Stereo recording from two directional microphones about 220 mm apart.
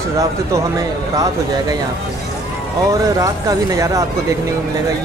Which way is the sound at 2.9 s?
15° right (ahead or behind).